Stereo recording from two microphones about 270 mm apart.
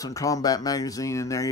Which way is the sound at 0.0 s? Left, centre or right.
Centre.